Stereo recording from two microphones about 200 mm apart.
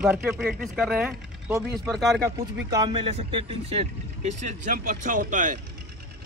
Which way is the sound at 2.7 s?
25° right (ahead or behind).